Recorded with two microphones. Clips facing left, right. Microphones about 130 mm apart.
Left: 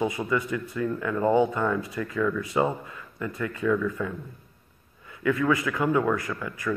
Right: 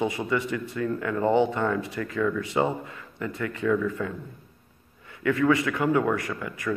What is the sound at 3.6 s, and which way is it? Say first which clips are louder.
Speech: even; 40° right (ahead or behind).